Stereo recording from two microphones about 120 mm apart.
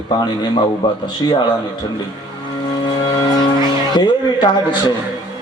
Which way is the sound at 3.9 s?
40° left (ahead or behind).